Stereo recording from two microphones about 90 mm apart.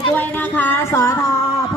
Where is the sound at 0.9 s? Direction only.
30° left (ahead or behind).